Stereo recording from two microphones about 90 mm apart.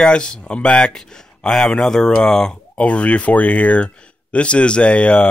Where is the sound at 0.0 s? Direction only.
10° left (ahead or behind).